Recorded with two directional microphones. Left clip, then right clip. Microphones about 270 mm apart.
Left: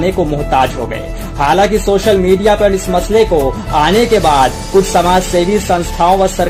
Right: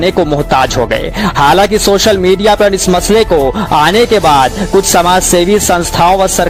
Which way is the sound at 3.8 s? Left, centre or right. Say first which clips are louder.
Right 1 dB; right.